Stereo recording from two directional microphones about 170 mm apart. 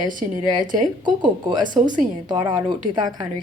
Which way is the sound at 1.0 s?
25° right (ahead or behind).